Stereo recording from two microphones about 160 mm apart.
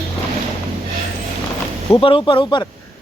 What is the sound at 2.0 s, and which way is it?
Speech, 30° left (ahead or behind).